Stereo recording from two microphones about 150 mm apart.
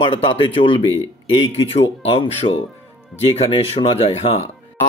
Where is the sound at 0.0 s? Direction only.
35° left (ahead or behind).